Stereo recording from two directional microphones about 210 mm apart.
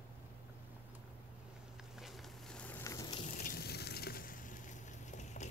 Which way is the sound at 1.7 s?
Centre (ahead or behind).